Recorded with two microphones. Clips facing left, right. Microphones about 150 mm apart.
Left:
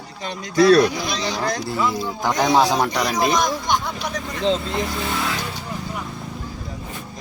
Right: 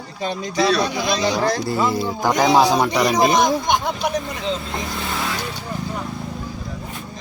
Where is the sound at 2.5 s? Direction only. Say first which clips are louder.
Right 1 dB; 10° right (ahead or behind).